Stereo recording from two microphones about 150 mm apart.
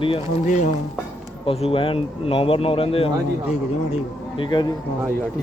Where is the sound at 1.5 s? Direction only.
40° left (ahead or behind).